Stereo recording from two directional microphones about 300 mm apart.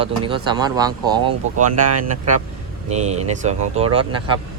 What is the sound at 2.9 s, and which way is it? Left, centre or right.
Speech, right.